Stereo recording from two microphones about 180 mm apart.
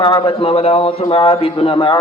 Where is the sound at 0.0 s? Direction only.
30° left (ahead or behind).